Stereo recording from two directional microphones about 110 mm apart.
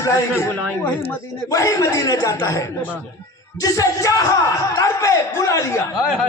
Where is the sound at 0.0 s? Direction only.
25° left (ahead or behind).